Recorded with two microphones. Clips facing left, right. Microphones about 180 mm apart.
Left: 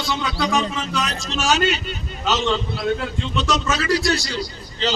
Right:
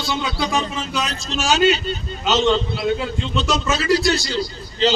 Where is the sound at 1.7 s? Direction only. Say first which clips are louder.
Right 4 dB; 30° right (ahead or behind).